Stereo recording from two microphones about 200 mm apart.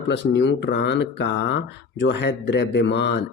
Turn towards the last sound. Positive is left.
turn(degrees=60)  # may be behind; listen again after turning